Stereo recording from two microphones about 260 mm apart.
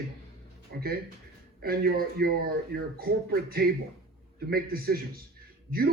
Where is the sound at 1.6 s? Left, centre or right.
Right.